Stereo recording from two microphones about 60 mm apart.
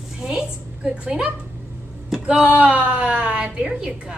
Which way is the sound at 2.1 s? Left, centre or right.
Centre.